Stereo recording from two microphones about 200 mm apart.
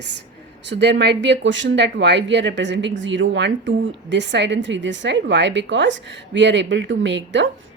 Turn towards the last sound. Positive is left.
turn(degrees=-65)  # may be behind; listen again after turning